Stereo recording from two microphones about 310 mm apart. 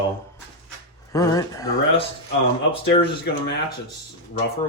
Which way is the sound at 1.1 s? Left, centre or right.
Centre.